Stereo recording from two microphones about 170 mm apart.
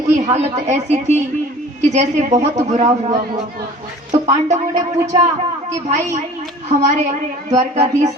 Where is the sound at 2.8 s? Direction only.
25° right (ahead or behind).